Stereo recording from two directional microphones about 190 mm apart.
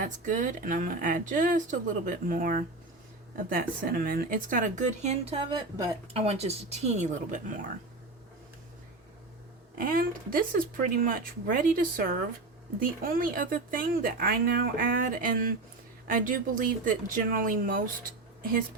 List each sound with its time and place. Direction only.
0.0 s a woman's voice: 40° right (ahead or behind); by 5.9 s 20° right (ahead or behind)
6.1 s a woman's voice: 35° right (ahead or behind)
9.7 s speech: 45° right (ahead or behind)